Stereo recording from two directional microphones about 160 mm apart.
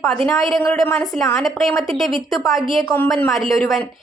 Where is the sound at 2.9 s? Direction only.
10° left (ahead or behind).